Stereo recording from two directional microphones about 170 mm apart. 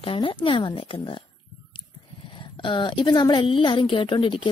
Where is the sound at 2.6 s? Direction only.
30° left (ahead or behind).